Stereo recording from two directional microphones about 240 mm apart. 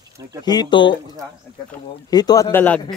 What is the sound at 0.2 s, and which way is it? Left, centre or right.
Speech, centre.